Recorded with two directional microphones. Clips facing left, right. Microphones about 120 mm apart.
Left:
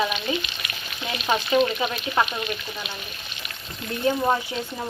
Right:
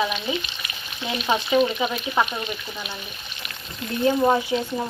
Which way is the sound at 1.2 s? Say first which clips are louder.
Right 1 dB; 5° right (ahead or behind).